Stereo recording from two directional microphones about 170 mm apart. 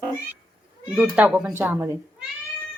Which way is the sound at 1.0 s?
10° right (ahead or behind).